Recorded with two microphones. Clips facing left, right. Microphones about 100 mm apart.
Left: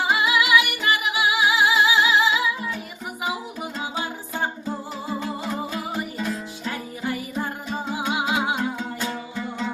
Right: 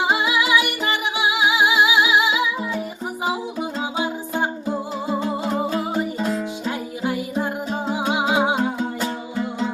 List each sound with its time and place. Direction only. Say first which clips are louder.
0.0 s music: right 1 dB; 25° right (ahead or behind)
3.9 s music: right 5 dB; 20° right (ahead or behind)
7.7 s music: right 2 dB; 25° right (ahead or behind)